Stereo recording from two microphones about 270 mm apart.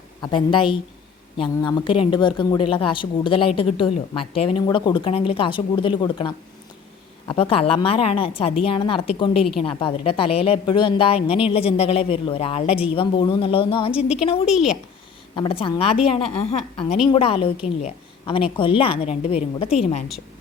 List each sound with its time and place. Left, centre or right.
0.2 s a woman's voice: centre
9.4 s speech: centre
9.6 s a woman's voice: left
14.4 s speech: centre
15.4 s a woman's voice: centre